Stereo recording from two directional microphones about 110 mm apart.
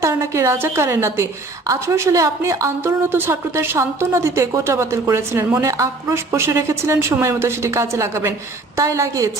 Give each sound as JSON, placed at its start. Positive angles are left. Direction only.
{"t": 0.0, "sound": "a woman's voice", "side_deg": -25}